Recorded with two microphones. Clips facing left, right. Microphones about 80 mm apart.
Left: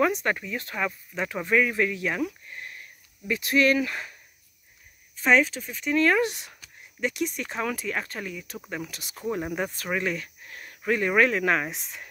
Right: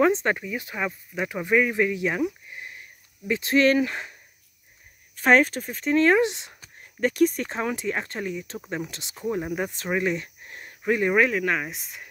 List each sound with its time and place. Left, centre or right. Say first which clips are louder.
0.0 s speech: right 3 dB; right
5.1 s speech: right 3 dB; right
7.0 s speech: right 7 dB; right
9.4 s speech: right 1 dB; centre
9.7 s cricket: right 3 dB; centre
10.8 s speech: right 1 dB; centre
11.2 s speech: left 1 dB; centre